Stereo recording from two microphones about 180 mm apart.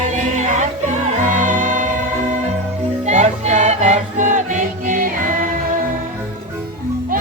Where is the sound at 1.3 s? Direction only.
45° right (ahead or behind).